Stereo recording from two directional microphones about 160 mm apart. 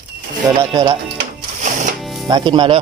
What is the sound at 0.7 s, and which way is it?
Speech, 30° right (ahead or behind).